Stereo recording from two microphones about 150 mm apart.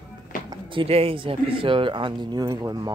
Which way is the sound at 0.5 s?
35° right (ahead or behind).